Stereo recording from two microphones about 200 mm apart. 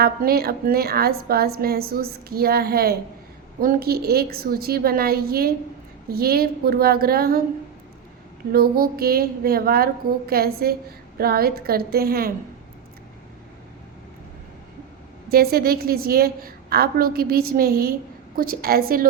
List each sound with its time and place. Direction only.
0.0 s a woman's voice: 50° right (ahead or behind)
8.5 s a woman's voice: 50° right (ahead or behind)
15.3 s a woman's voice: 50° right (ahead or behind)